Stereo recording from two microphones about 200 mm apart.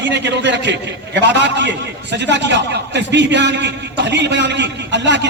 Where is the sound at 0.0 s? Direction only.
60° right (ahead or behind).